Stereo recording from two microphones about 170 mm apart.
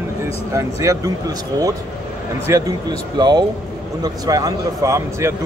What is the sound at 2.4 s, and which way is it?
A man's voice, 20° right (ahead or behind).